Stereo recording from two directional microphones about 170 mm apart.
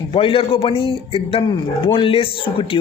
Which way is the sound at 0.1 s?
30° left (ahead or behind).